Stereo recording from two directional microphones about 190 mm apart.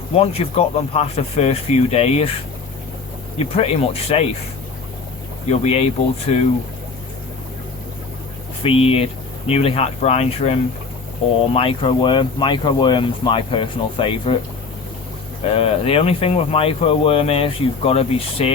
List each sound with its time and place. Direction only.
0.2 s speech: 30° left (ahead or behind)
3.3 s speech: 35° left (ahead or behind)
5.5 s speech: 35° left (ahead or behind)
8.6 s speech: 30° left (ahead or behind)
15.4 s speech: 30° left (ahead or behind)